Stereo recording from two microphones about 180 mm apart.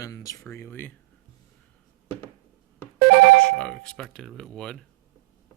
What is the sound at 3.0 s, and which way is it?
Ringtone, 55° right (ahead or behind).